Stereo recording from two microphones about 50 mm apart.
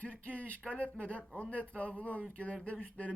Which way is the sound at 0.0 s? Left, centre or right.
Left.